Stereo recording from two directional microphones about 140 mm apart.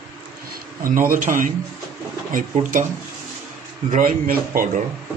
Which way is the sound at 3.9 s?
80° right.